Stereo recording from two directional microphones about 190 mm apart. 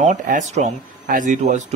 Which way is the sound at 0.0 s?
40° right (ahead or behind).